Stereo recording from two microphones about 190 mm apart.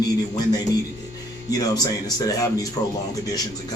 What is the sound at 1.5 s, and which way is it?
Speech, 20° left (ahead or behind).